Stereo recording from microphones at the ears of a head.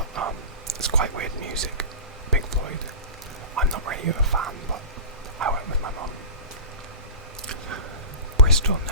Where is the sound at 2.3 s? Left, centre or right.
Right.